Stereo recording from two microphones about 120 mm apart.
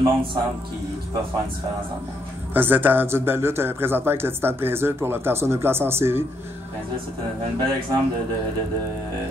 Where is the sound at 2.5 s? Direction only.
15° right (ahead or behind).